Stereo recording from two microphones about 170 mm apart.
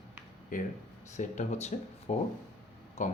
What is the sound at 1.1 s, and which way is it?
Speech, 45° left (ahead or behind).